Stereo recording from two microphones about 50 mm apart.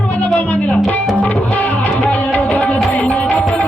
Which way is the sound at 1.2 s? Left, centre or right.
Left.